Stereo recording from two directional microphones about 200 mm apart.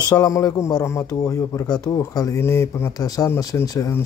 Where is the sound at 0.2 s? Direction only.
15° left (ahead or behind).